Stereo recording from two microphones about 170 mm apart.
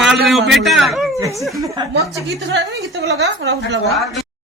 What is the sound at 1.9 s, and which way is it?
A woman's voice, 90° right.